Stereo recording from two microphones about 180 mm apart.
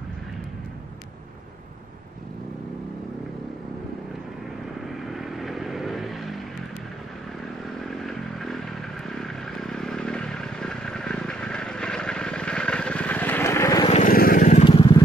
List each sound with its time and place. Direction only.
5.0 s vehicle: centre (ahead or behind)
7.8 s motorcycle: centre (ahead or behind)
9.1 s vehicle: centre (ahead or behind)
14.0 s vehicle: 50° left (ahead or behind)
14.6 s vehicle: 30° left (ahead or behind)